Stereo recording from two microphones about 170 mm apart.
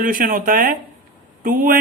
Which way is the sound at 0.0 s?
55° right (ahead or behind).